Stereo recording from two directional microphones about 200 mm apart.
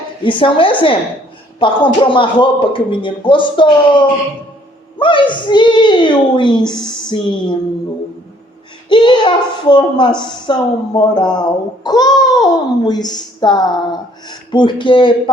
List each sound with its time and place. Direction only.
0.2 s a child's voice: 25° left (ahead or behind)
4.9 s a child's voice: 25° left (ahead or behind)
8.9 s a child's voice: 25° left (ahead or behind)